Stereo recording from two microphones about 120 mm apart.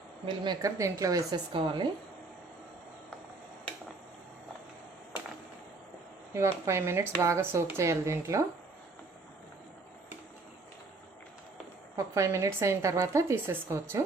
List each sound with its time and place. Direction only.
0.6 s speech: 25° right (ahead or behind)
1.5 s a woman's voice: 40° right (ahead or behind)
6.3 s speech: 25° right (ahead or behind)
11.9 s speech: 25° right (ahead or behind)